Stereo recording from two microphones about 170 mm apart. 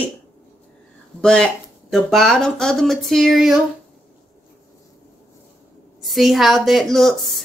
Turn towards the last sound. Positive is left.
turn(degrees=0)  # may be behind; listen again after turning